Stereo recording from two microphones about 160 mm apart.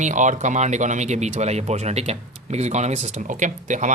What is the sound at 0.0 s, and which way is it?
Speech, 50° right (ahead or behind).